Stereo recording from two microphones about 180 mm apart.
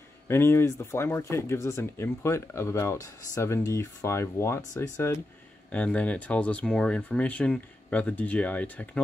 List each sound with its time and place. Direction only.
0.3 s speech: 15° left (ahead or behind)